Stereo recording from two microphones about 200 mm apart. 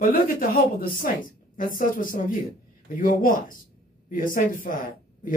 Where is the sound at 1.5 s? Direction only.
45° left (ahead or behind).